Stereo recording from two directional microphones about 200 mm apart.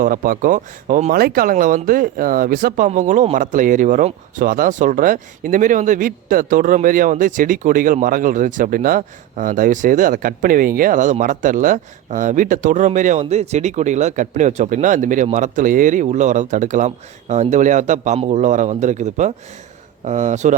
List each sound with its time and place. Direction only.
0.0 s speech: 45° right (ahead or behind)